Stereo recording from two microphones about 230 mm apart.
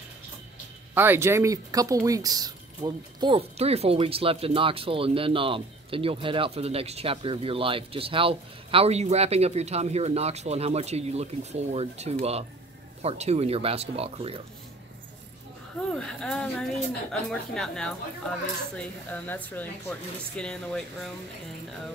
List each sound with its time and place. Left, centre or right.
0.9 s speech: centre; by 14.4 s right
15.9 s speech: centre